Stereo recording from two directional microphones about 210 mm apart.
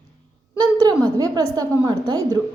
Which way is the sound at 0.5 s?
20° right (ahead or behind).